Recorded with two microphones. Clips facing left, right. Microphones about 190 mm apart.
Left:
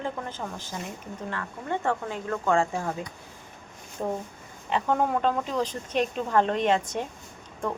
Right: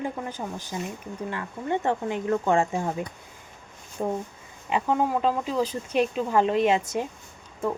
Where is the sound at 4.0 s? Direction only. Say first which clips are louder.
Right 2 dB; 15° right (ahead or behind).